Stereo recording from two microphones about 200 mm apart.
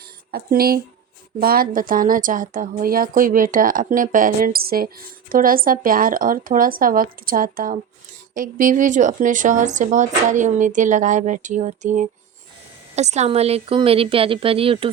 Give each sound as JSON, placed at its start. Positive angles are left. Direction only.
{"t": 0.3, "sound": "a woman's voice", "side_deg": -50}